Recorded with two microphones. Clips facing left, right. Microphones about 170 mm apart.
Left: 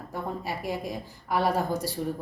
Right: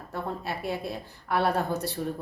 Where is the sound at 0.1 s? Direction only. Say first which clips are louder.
Even; 10° left (ahead or behind).